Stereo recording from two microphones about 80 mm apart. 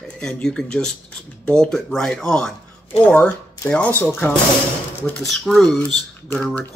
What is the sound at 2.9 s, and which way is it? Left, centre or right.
Speech, left.